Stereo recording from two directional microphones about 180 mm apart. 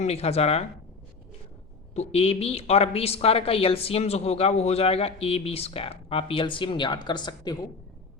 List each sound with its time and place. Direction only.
0.0 s a woman's voice: 35° left (ahead or behind)
2.0 s a woman's voice: 35° left (ahead or behind)